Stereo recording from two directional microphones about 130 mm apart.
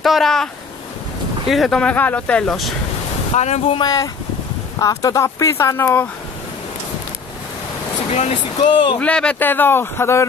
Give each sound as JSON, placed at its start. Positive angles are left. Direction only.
{"t": 0.0, "sound": "speech", "side_deg": 0}
{"t": 1.5, "sound": "speech", "side_deg": 0}
{"t": 3.3, "sound": "speech", "side_deg": 60}
{"t": 3.6, "sound": "speech", "side_deg": 35}
{"t": 8.1, "sound": "speech", "side_deg": 60}
{"t": 8.6, "sound": "speech", "side_deg": 40}
{"t": 9.0, "sound": "speech", "side_deg": 10}